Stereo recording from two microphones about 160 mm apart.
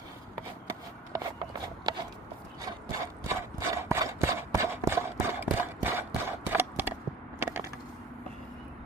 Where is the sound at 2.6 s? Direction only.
20° right (ahead or behind).